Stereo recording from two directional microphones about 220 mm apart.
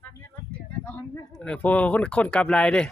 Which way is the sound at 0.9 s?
5° left (ahead or behind).